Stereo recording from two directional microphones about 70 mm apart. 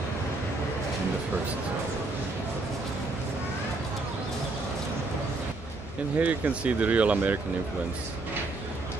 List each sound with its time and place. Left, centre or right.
6.1 s speech: right